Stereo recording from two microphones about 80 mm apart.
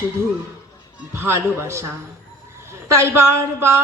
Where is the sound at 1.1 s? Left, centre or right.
Right.